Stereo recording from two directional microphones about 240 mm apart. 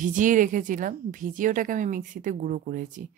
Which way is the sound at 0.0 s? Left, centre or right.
Right.